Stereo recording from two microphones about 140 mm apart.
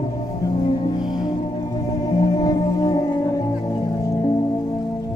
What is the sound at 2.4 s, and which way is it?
Music, 25° left (ahead or behind).